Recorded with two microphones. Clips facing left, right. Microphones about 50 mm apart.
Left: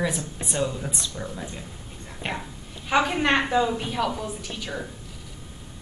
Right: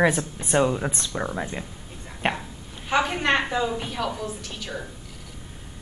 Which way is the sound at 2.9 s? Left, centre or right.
Centre.